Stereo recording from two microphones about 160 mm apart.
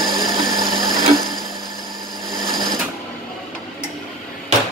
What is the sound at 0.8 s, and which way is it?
Sewing machine, 25° right (ahead or behind).